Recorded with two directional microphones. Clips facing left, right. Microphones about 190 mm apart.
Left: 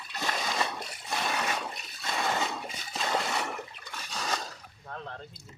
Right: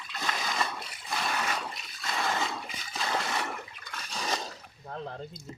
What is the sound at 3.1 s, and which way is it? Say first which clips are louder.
Water: left 1 dB; centre (ahead or behind).